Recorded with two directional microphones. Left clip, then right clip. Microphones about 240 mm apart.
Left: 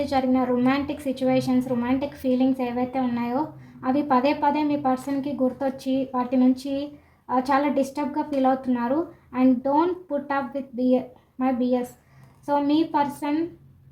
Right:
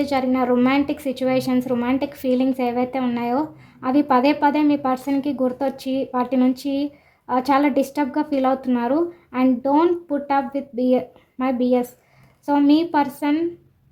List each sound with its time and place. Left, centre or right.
0.0 s a woman's voice: right